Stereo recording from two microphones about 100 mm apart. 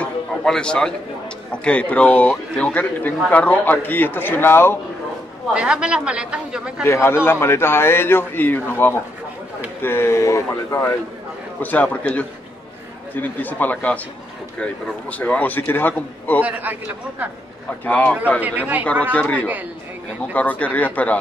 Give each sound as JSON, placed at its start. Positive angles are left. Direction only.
{"t": 0.0, "sound": "a sound", "side_deg": 5}
{"t": 1.5, "sound": "a man's voice", "side_deg": 10}
{"t": 5.5, "sound": "a woman's voice", "side_deg": -10}
{"t": 6.8, "sound": "a man's voice", "side_deg": 25}
{"t": 11.6, "sound": "a man's voice", "side_deg": 15}
{"t": 16.4, "sound": "a woman's voice", "side_deg": -15}
{"t": 17.8, "sound": "a man's voice", "side_deg": 15}
{"t": 18.4, "sound": "a woman's voice", "side_deg": -15}
{"t": 20.3, "sound": "a man's voice", "side_deg": 15}